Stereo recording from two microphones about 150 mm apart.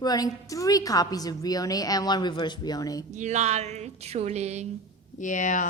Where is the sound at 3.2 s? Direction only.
50° right (ahead or behind).